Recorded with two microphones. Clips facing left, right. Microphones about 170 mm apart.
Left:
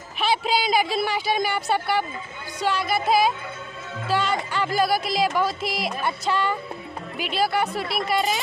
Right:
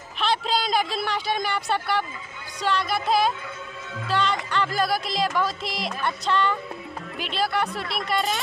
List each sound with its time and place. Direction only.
0.2 s speech: 5° left (ahead or behind)
4.1 s music: 5° left (ahead or behind)
5.4 s speech: 5° left (ahead or behind)